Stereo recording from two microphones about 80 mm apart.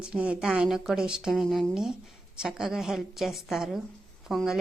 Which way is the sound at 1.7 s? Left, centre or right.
Centre.